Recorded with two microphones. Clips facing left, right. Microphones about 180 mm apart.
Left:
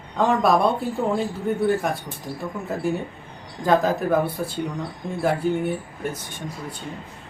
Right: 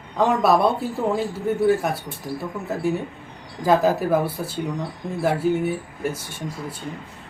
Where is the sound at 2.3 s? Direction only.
25° left (ahead or behind).